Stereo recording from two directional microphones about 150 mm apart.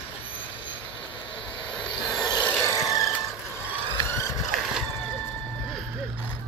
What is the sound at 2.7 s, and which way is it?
Vehicle, 20° left (ahead or behind).